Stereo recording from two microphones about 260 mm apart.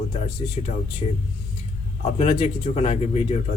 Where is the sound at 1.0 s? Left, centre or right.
Left.